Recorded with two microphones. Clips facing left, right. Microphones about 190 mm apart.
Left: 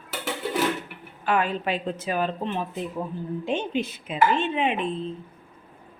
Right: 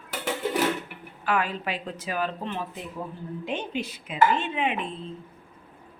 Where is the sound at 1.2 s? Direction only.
25° left (ahead or behind).